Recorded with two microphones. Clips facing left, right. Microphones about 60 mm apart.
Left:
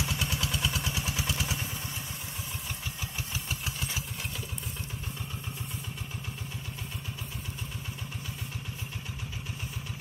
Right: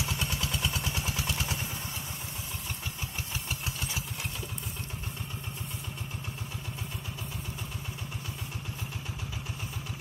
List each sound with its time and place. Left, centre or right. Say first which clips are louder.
0.3 s vehicle: left 1 dB; right